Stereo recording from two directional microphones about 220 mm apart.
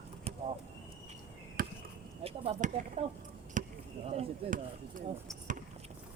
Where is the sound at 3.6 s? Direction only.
35° right (ahead or behind).